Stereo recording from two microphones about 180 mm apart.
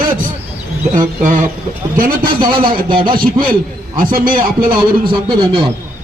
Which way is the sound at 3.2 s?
50° right (ahead or behind).